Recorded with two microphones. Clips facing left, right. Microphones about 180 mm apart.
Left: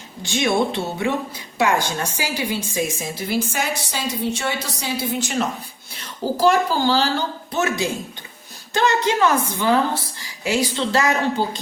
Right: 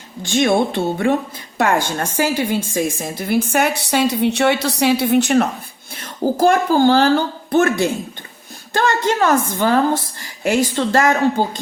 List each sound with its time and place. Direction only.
0.2 s a woman's voice: 50° right (ahead or behind)
5.9 s a child's voice: 50° right (ahead or behind)